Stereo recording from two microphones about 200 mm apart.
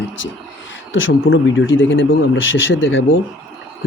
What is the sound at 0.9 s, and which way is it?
Speech, 75° left (ahead or behind).